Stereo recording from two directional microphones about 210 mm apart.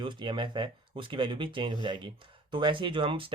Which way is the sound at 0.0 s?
20° right (ahead or behind).